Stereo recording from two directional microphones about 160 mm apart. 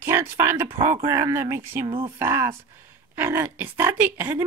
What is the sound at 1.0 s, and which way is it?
Speech, 20° right (ahead or behind).